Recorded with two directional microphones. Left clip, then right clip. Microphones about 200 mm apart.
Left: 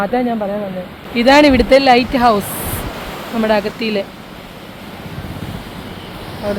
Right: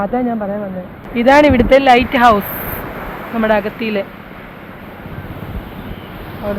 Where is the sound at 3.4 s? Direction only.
15° left (ahead or behind).